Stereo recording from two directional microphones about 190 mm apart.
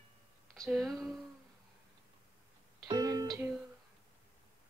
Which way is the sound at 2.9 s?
20° right (ahead or behind).